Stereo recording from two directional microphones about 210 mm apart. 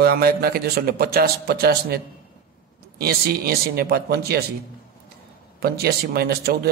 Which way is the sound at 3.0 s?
45° right (ahead or behind).